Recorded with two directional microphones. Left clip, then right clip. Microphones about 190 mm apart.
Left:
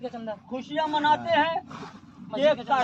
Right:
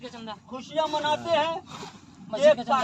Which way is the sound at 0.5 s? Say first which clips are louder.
Even; 50° right (ahead or behind).